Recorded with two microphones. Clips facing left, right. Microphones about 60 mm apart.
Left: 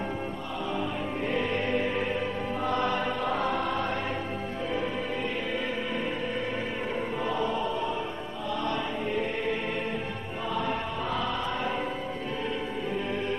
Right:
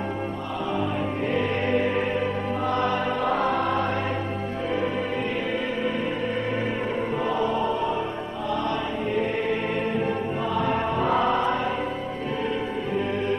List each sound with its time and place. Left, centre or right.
1.3 s music: right
3.2 s music: right
7.2 s choir: right
8.6 s music: right